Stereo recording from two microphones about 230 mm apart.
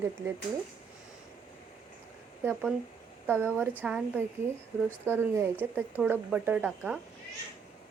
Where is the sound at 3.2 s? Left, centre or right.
Centre.